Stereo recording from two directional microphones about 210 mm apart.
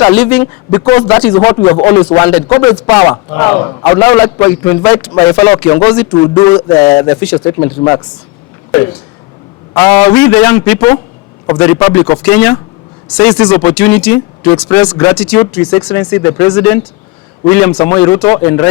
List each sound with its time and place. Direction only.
0.0 s a man's voice: 10° left (ahead or behind)
9.7 s a man's voice: 10° left (ahead or behind)
13.7 s a man's voice: 5° left (ahead or behind)